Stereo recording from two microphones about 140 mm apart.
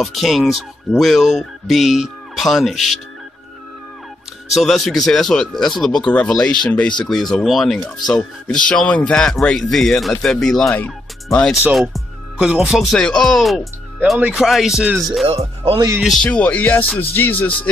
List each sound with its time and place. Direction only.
0.0 s speech: centre (ahead or behind)
4.6 s speech: centre (ahead or behind)
11.9 s speech: 5° right (ahead or behind)
15.2 s speech: 40° right (ahead or behind)
16.0 s speech: centre (ahead or behind)